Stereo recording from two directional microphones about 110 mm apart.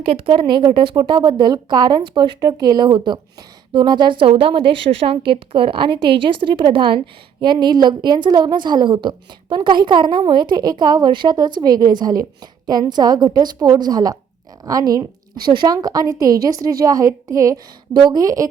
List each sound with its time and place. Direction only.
0.0 s a woman's voice: 55° right (ahead or behind); by 18.4 s 35° right (ahead or behind)